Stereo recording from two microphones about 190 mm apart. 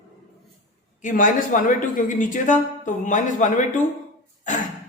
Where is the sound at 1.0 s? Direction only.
40° left (ahead or behind).